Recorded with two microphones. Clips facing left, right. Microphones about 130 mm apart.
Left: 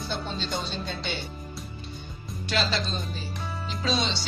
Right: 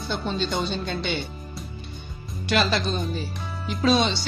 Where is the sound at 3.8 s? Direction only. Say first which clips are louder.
Right 7 dB; 55° right (ahead or behind).